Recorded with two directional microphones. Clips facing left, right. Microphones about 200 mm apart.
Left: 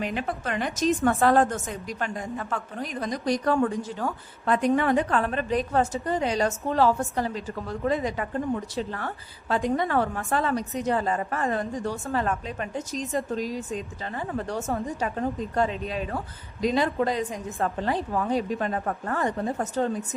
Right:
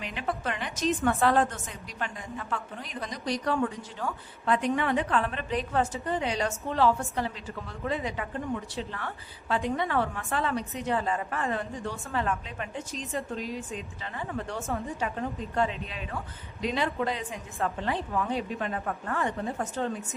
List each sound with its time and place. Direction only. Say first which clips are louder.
0.0 s a woman's voice: left 3 dB; 45° left (ahead or behind)